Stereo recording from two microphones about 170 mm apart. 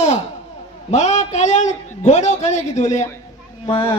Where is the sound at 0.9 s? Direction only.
40° left (ahead or behind).